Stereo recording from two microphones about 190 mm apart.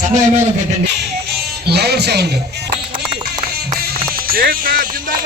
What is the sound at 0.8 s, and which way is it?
Music, 60° right (ahead or behind).